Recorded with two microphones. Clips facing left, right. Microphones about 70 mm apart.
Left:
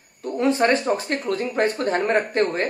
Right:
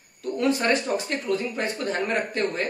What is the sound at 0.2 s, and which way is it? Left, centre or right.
Speech, left.